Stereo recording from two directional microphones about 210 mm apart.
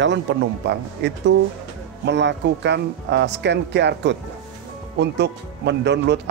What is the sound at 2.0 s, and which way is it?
Speech, 55° right (ahead or behind).